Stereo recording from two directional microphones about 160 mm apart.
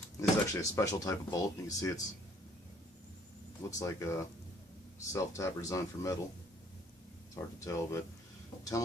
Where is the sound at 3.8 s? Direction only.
15° left (ahead or behind).